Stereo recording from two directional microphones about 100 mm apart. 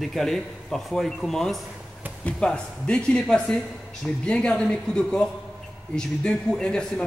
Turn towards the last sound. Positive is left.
turn(degrees=10)  # may be behind; listen again after turning